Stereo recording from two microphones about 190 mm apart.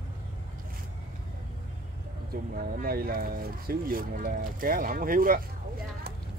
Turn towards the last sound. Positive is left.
turn(degrees=-50)  # may be behind; listen again after turning